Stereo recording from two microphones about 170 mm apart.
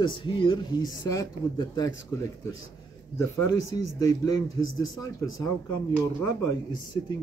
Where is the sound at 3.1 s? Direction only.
20° left (ahead or behind).